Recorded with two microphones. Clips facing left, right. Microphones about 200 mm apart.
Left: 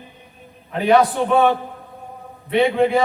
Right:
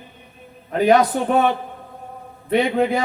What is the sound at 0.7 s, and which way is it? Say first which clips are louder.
Speech: even; 40° right (ahead or behind).